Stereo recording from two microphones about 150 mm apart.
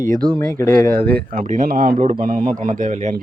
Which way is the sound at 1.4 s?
60° right (ahead or behind).